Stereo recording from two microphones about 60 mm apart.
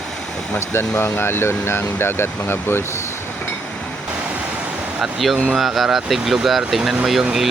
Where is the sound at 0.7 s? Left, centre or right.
Left.